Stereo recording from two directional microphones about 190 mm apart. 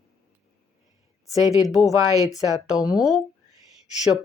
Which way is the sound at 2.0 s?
20° right (ahead or behind).